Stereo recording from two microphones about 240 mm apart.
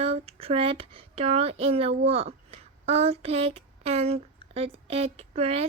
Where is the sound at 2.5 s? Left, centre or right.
Right.